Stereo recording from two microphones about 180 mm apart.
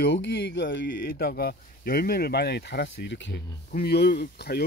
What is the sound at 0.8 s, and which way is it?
Speech, 55° left (ahead or behind).